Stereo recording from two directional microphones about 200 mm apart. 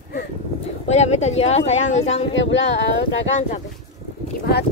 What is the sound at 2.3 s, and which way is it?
Speech, 65° left (ahead or behind).